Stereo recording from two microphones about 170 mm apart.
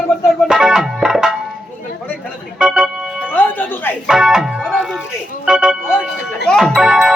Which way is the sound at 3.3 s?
10° left (ahead or behind).